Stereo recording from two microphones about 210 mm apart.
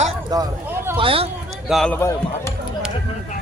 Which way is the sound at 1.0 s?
25° right (ahead or behind).